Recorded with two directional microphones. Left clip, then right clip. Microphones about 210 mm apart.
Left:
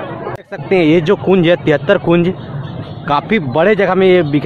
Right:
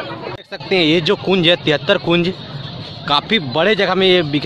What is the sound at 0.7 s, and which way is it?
Speech, 10° right (ahead or behind).